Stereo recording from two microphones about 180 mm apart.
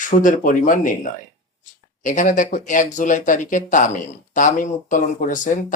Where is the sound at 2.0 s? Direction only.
45° left (ahead or behind).